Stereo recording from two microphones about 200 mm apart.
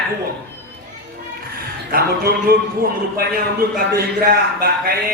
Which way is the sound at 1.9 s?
50° right (ahead or behind).